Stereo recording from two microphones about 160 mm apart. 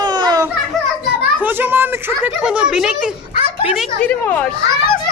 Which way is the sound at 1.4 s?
10° right (ahead or behind).